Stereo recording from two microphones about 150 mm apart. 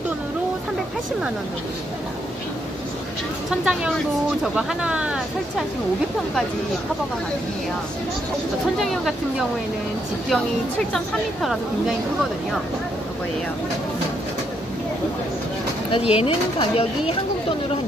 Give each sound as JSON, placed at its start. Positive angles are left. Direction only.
{"t": 3.4, "sound": "speech", "side_deg": -5}
{"t": 8.7, "sound": "speech", "side_deg": 0}
{"t": 10.3, "sound": "speech", "side_deg": 0}
{"t": 15.9, "sound": "speech", "side_deg": 40}